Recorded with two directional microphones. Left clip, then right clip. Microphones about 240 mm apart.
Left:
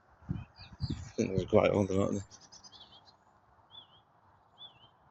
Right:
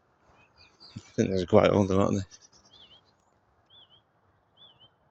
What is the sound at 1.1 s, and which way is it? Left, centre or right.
Speech, right.